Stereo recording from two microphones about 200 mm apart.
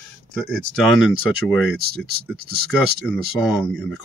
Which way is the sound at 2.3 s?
50° right (ahead or behind).